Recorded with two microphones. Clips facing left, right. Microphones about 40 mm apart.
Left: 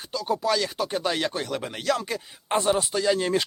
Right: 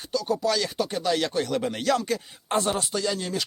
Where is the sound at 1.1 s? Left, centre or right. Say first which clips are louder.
Right 2 dB; centre.